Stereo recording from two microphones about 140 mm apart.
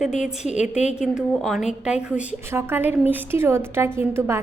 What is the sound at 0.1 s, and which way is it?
Speech, 55° left (ahead or behind).